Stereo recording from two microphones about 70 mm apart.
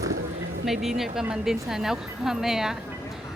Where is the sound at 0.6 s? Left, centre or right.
Centre.